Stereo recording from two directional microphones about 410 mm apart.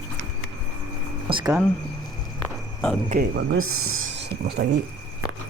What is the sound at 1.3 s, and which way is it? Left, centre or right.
Speech, centre.